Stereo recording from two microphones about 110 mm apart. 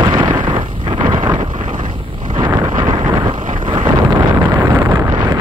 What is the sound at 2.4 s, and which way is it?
Wind noise, 40° right (ahead or behind).